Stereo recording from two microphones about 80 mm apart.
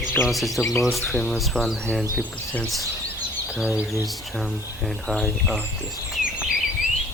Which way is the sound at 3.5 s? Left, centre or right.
Centre.